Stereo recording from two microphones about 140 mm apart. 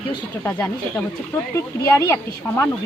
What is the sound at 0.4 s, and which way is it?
A woman's voice, 15° left (ahead or behind).